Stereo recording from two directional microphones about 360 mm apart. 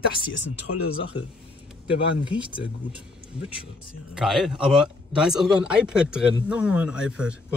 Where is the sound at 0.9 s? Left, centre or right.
Centre.